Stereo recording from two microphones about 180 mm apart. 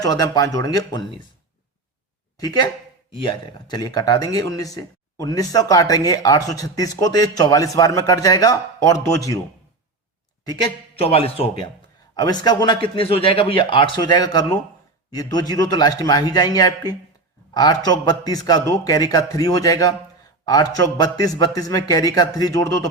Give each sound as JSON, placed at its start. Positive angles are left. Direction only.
{"t": 0.0, "sound": "a man's voice", "side_deg": 20}
{"t": 2.4, "sound": "a man's voice", "side_deg": 20}
{"t": 10.4, "sound": "speech", "side_deg": 20}
{"t": 11.0, "sound": "a man's voice", "side_deg": 35}